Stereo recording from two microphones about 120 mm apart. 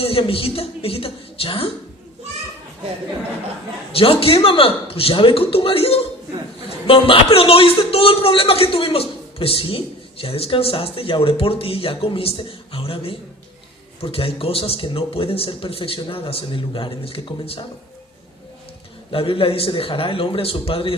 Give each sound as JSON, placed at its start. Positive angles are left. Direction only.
{"t": 0.0, "sound": "a man's voice", "side_deg": 50}
{"t": 3.9, "sound": "a man's voice", "side_deg": 50}
{"t": 19.1, "sound": "a man's voice", "side_deg": 50}